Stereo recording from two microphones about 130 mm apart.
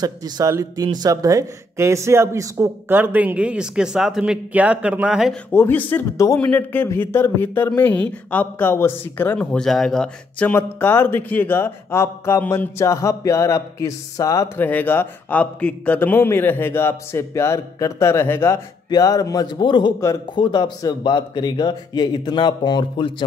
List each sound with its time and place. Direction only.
0.0 s a man's voice: 30° right (ahead or behind); by 5.3 s 5° right (ahead or behind)
5.5 s a man's voice: 15° left (ahead or behind)
10.5 s speech: 15° left (ahead or behind)
14.6 s a man's voice: 15° left (ahead or behind); by 23.2 s 40° left (ahead or behind)